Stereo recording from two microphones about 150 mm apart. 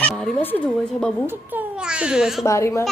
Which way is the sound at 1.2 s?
10° right (ahead or behind).